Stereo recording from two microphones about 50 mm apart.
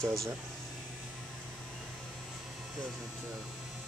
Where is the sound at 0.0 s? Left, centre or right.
Right.